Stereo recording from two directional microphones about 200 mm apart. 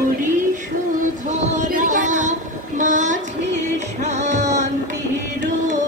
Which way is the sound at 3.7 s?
35° right (ahead or behind).